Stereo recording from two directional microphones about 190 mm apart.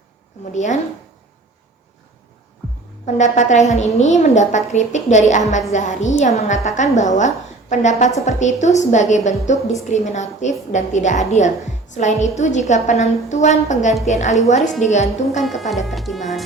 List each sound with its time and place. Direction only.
0.5 s a woman's voice: 40° left (ahead or behind)
3.2 s a woman's voice: 40° left (ahead or behind)
15.4 s speech: centre (ahead or behind)